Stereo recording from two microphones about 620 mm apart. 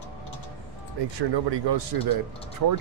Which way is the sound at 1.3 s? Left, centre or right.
Right.